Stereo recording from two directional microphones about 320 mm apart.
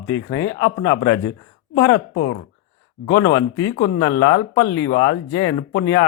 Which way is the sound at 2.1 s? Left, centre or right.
Left.